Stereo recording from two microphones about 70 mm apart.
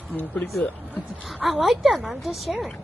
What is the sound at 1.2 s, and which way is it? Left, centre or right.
Speech, centre.